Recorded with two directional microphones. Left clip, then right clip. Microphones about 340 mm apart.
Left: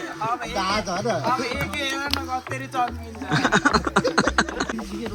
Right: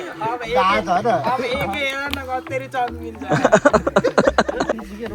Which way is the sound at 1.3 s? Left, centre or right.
Centre.